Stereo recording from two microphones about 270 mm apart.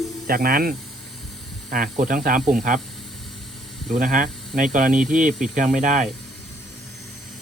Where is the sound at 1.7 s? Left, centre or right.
Right.